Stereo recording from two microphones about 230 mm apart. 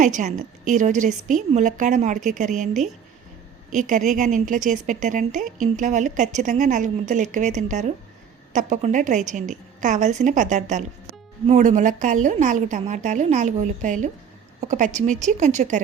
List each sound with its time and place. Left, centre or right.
0.0 s a woman's voice: right
3.7 s a woman's voice: right